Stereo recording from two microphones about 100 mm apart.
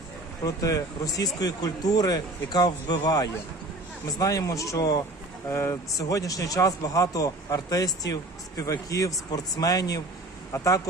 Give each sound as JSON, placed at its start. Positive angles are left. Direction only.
{"t": 0.4, "sound": "speech", "side_deg": 35}
{"t": 5.5, "sound": "speech", "side_deg": 25}